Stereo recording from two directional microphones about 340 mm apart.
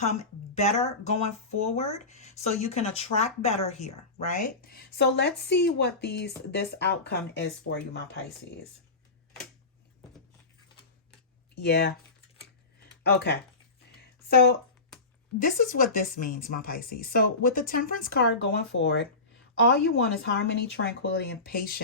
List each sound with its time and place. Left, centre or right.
0.0 s speech: centre
11.5 s speech: left
13.0 s speech: left